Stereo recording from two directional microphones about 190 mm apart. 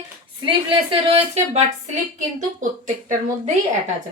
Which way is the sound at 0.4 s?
25° right (ahead or behind).